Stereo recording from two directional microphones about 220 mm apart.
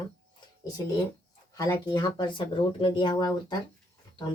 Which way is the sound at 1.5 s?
15° left (ahead or behind).